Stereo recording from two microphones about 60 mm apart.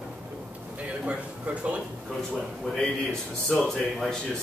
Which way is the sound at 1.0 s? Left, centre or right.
Centre.